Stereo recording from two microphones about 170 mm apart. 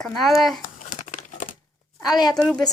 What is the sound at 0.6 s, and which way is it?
Crumpling, 50° left (ahead or behind).